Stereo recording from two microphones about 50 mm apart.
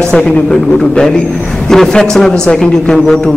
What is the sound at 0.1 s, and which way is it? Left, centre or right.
A man's voice, centre.